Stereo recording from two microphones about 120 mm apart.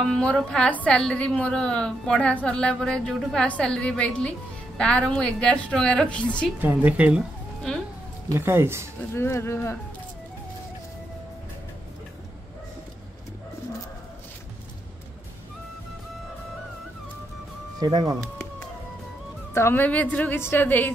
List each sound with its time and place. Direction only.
0.0 s a woman's voice: 10° left (ahead or behind)
6.6 s a woman's voice: 15° right (ahead or behind)
8.3 s speech: 20° right (ahead or behind)
9.1 s speech: 20° left (ahead or behind)
17.7 s speech: 35° right (ahead or behind)
19.5 s a woman's voice: 20° left (ahead or behind)